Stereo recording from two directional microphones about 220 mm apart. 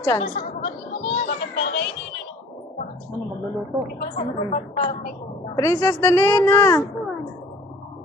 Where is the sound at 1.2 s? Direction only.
55° left (ahead or behind).